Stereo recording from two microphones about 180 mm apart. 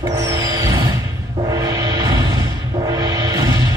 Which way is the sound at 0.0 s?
20° right (ahead or behind).